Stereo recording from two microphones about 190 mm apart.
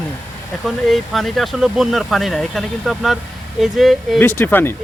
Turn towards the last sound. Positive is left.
turn(degrees=10)  # may be behind; listen again after turning